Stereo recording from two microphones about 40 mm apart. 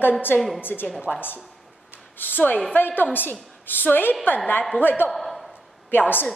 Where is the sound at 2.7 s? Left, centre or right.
Left.